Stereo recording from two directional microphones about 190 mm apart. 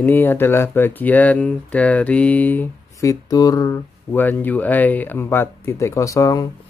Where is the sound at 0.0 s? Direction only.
10° left (ahead or behind).